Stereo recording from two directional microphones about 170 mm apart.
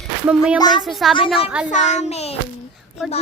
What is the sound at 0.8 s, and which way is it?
Speech, centre (ahead or behind).